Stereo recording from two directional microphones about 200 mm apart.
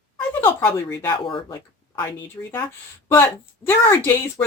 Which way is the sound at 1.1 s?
25° left (ahead or behind).